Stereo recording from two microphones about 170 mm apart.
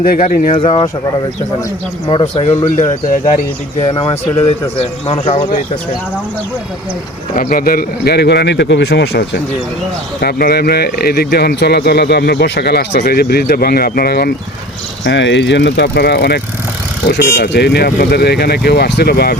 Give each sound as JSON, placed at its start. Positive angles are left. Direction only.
{"t": 0.0, "sound": "speech", "side_deg": 60}
{"t": 0.5, "sound": "speech", "side_deg": 30}
{"t": 2.0, "sound": "speech", "side_deg": 30}
{"t": 3.1, "sound": "speech", "side_deg": 45}
{"t": 3.8, "sound": "speech", "side_deg": 30}
{"t": 7.3, "sound": "speech", "side_deg": 55}
{"t": 10.2, "sound": "speech", "side_deg": 65}
{"t": 15.0, "sound": "speech", "side_deg": 90}
{"t": 17.1, "sound": "speech", "side_deg": 90}